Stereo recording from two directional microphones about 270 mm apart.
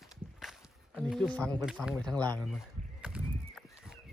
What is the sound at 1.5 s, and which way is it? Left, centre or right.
Speech, centre.